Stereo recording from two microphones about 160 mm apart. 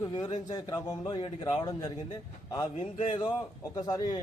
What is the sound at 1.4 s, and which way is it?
Speech, 25° left (ahead or behind).